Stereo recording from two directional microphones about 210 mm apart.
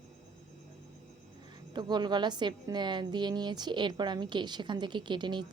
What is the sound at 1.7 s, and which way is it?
A woman's voice, 20° right (ahead or behind).